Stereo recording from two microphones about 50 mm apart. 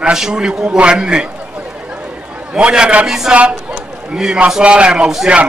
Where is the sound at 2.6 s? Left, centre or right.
Right.